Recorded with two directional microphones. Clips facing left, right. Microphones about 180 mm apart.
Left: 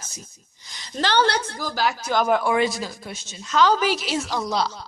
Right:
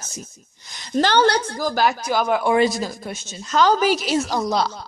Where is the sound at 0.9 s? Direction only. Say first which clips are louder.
Right 4 dB; 45° right (ahead or behind).